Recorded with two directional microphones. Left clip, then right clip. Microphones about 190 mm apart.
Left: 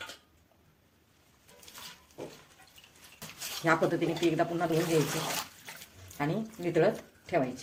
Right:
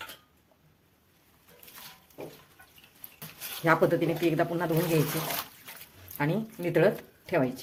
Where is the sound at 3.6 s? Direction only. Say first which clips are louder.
Right 4 dB; 25° right (ahead or behind).